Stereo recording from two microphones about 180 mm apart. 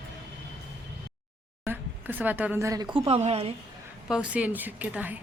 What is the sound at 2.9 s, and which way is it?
Speech, 35° right (ahead or behind).